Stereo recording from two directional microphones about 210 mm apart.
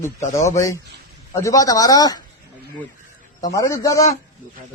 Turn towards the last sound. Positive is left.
turn(degrees=15)  # may be behind; listen again after turning